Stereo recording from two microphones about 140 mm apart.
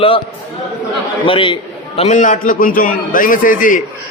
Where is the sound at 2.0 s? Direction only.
60° left (ahead or behind).